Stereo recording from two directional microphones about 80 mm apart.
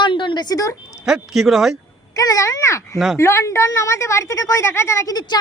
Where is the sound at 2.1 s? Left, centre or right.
Left.